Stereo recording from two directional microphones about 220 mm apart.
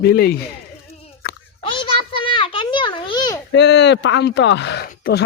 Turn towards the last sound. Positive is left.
turn(degrees=40)  # may be behind; listen again after turning